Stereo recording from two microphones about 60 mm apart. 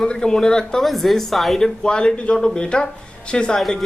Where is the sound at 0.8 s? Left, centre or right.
Centre.